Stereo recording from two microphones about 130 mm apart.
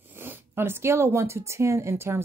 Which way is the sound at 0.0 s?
15° right (ahead or behind).